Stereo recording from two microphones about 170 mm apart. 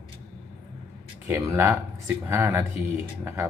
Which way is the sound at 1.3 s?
15° right (ahead or behind).